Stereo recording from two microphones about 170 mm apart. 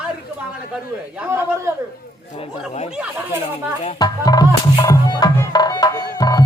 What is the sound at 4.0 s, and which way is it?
Music, 25° left (ahead or behind).